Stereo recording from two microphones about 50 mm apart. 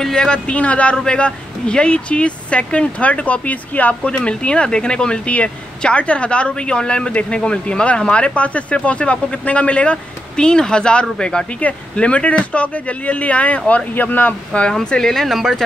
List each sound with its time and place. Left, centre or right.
0.0 s speech: centre; by 4.1 s left
4.1 s speech: centre; by 14.3 s left
14.5 s speech: left
14.9 s speech: centre